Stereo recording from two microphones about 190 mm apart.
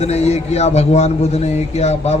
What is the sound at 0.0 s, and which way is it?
A man's voice, 35° left (ahead or behind).